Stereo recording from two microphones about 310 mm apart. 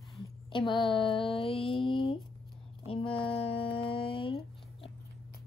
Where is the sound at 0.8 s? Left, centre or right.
Centre.